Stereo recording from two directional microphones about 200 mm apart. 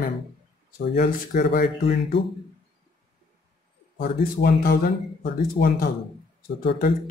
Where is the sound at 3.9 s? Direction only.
50° left (ahead or behind).